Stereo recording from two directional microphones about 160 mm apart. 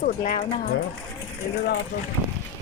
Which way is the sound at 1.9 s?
90° left.